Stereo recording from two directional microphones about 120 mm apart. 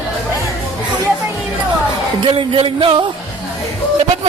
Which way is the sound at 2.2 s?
45° right (ahead or behind).